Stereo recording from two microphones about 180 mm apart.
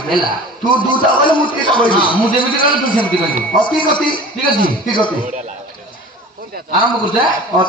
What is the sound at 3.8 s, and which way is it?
A man's voice, 25° left (ahead or behind).